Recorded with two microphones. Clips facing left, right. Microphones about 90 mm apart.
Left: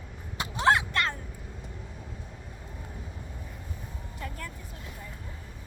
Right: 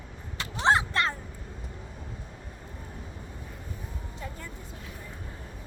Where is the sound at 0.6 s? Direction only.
30° right (ahead or behind).